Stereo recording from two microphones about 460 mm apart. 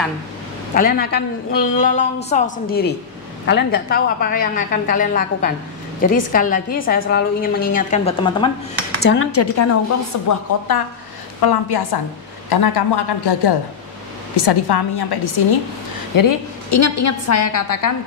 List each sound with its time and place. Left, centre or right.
0.7 s a woman's voice: centre
9.0 s a woman's voice: left
11.4 s a woman's voice: left
16.2 s a woman's voice: left